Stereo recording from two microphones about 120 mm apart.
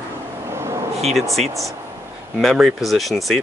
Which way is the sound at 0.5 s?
25° right (ahead or behind).